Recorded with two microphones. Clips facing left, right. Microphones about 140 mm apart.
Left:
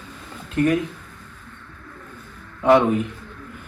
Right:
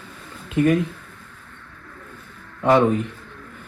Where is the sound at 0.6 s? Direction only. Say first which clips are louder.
Right 1 dB; centre (ahead or behind).